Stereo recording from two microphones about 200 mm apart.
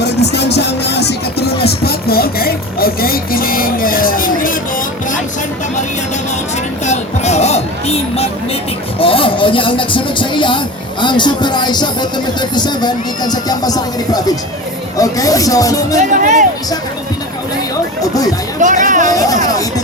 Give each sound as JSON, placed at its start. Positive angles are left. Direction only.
{"t": 0.3, "sound": "music", "side_deg": 55}
{"t": 1.8, "sound": "a sound", "side_deg": 50}
{"t": 6.8, "sound": "music", "side_deg": 35}
{"t": 9.0, "sound": "speech", "side_deg": 25}
{"t": 16.0, "sound": "speech", "side_deg": -40}
{"t": 18.0, "sound": "speech", "side_deg": 20}
{"t": 18.6, "sound": "speech", "side_deg": -40}